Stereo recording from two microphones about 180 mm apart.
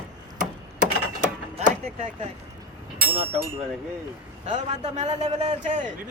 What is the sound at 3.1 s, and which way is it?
A man's voice, 30° right (ahead or behind).